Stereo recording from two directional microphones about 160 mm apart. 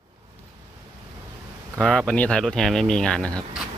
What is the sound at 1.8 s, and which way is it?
Speech, 5° left (ahead or behind).